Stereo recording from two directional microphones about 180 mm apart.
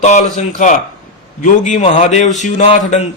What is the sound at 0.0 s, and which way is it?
Speech, 40° left (ahead or behind).